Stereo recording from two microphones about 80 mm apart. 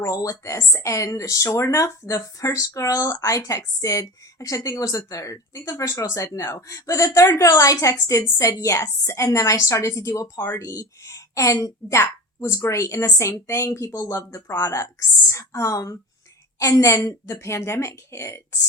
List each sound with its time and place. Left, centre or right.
0.0 s a woman's voice: left